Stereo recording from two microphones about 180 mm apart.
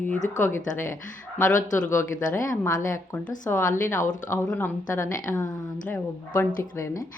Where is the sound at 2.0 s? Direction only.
15° left (ahead or behind).